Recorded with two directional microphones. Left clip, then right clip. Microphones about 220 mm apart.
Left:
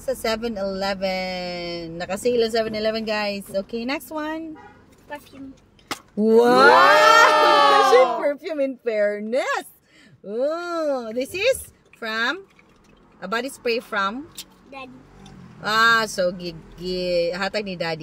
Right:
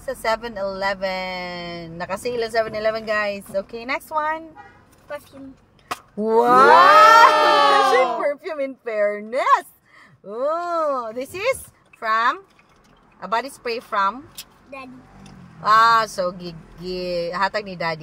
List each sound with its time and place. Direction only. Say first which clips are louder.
0.0 s speech: right 1 dB; 20° left (ahead or behind)
6.1 s speech: right 1 dB; 20° left (ahead or behind)
6.7 s a sound: right 6 dB; centre (ahead or behind)
8.3 s a woman's voice: left 1 dB; 15° left (ahead or behind)
15.6 s speech: right 3 dB; 20° left (ahead or behind)